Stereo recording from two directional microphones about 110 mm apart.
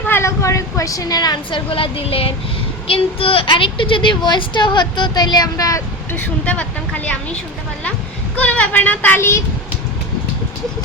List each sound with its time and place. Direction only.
0.1 s a woman's voice: 25° left (ahead or behind)
6.1 s a woman's voice: 15° left (ahead or behind)
8.4 s speech: 15° left (ahead or behind)